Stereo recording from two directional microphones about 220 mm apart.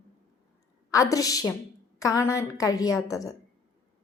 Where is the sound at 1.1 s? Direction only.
15° left (ahead or behind).